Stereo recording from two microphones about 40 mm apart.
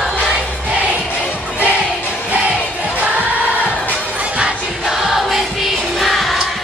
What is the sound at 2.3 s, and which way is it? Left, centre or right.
Crowd, right.